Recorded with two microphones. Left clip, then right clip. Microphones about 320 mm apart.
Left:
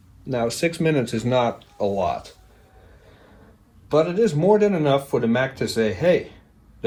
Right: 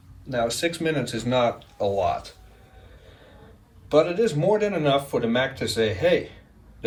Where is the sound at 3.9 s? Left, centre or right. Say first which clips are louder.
Left 1 dB; centre.